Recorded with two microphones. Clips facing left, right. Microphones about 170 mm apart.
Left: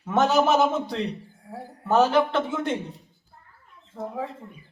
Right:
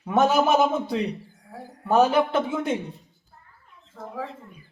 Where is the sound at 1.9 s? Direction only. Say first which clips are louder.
Right 1 dB; 10° right (ahead or behind).